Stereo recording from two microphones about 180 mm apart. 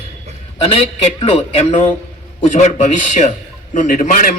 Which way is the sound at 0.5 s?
30° left (ahead or behind).